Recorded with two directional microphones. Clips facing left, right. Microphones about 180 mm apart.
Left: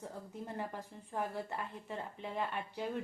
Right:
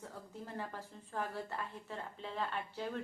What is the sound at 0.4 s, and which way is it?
A woman's voice, 15° left (ahead or behind).